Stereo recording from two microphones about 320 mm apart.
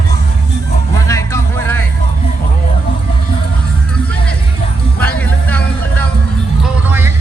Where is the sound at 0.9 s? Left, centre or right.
Centre.